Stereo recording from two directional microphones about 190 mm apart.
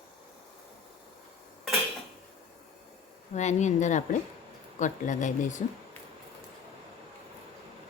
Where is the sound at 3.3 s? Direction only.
40° left (ahead or behind).